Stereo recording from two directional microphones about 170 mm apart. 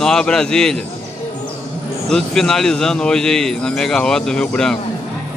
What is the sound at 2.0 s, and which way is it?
A man's voice, 5° left (ahead or behind).